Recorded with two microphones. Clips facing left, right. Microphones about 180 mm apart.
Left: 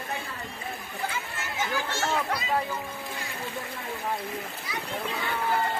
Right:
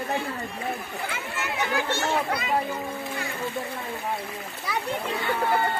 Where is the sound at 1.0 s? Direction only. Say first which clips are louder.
Right 1 dB; 65° right (ahead or behind).